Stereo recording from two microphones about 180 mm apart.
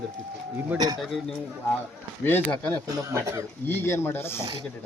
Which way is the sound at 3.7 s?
15° left (ahead or behind).